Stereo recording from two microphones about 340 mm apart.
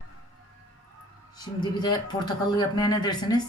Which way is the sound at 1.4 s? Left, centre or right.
Centre.